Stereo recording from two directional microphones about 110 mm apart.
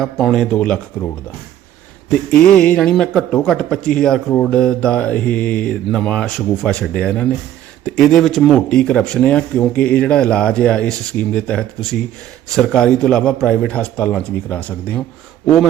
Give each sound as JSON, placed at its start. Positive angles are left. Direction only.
{"t": 0.0, "sound": "speech", "side_deg": 0}
{"t": 2.0, "sound": "speech", "side_deg": 10}